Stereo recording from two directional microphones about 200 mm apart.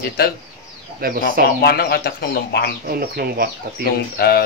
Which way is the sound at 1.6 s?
55° left (ahead or behind).